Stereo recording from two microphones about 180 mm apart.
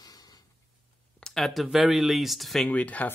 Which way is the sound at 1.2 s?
Centre (ahead or behind).